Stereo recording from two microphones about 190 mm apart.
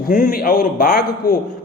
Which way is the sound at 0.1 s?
50° left (ahead or behind).